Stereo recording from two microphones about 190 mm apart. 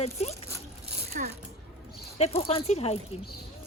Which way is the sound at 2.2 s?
30° left (ahead or behind).